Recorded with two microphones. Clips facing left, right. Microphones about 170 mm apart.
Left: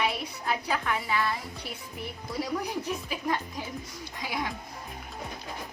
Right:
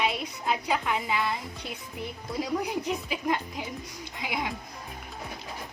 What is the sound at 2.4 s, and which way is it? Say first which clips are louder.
A woman's voice: right 2 dB; 15° right (ahead or behind).